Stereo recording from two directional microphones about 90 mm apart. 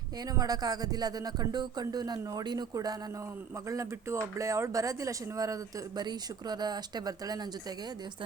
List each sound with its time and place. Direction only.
0.3 s speech: 45° right (ahead or behind)
3.7 s speech: 35° right (ahead or behind)
6.0 s speech: 50° right (ahead or behind)